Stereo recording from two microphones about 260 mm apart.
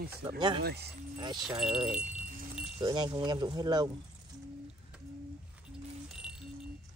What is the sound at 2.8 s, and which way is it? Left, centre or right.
Speech, centre.